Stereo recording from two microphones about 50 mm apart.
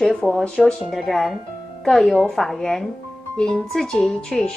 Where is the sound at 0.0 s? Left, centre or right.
Centre.